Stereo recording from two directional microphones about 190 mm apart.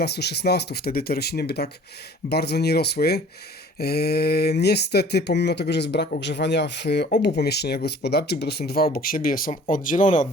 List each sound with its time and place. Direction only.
0.0 s speech: 60° left (ahead or behind); by 10.2 s 40° left (ahead or behind)